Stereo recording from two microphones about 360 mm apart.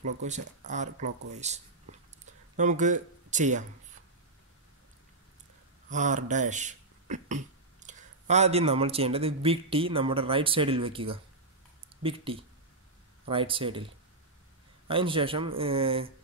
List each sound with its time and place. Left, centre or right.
0.0 s speech: centre
5.9 s speech: centre
14.9 s speech: centre